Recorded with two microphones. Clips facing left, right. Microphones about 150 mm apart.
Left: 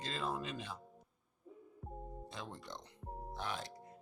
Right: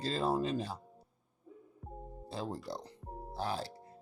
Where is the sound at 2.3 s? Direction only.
35° right (ahead or behind).